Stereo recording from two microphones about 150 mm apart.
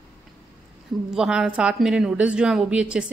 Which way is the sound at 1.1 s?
5° right (ahead or behind).